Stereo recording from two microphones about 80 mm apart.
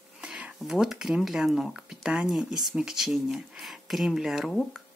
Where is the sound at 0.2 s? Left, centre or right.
Centre.